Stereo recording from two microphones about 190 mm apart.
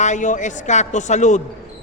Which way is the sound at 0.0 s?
40° left (ahead or behind).